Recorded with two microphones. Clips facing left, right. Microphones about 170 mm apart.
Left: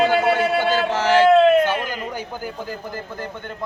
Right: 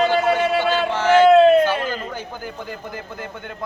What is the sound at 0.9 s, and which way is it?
Speech, 40° left (ahead or behind).